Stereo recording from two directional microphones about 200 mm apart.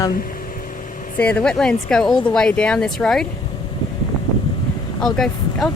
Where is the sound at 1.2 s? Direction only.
5° left (ahead or behind).